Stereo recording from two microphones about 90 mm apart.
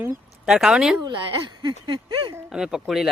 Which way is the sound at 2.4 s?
5° right (ahead or behind).